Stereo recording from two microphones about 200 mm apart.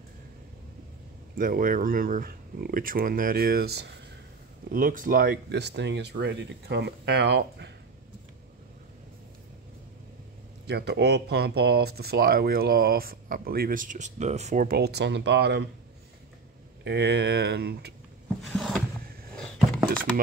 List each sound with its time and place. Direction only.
1.4 s speech: 45° right (ahead or behind)
10.7 s speech: 55° right (ahead or behind)
16.8 s speech: 60° right (ahead or behind)
18.4 s a sound: centre (ahead or behind)